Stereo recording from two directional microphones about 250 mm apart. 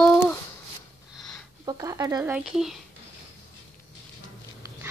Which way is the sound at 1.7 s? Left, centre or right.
Centre.